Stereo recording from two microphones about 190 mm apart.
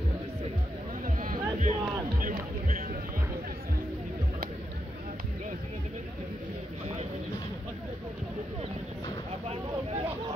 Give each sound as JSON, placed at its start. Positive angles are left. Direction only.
{"t": 1.0, "sound": "music", "side_deg": -45}